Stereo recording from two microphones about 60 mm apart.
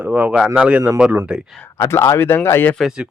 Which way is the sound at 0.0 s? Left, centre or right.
Right.